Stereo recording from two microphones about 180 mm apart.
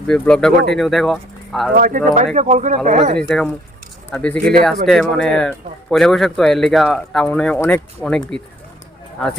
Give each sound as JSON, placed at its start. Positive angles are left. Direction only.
{"t": 0.1, "sound": "speech", "side_deg": 5}
{"t": 1.7, "sound": "speech", "side_deg": -50}
{"t": 3.2, "sound": "speech", "side_deg": 5}